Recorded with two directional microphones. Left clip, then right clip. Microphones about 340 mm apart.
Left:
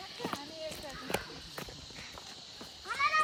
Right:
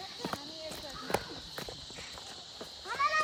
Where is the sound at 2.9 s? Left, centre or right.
Right.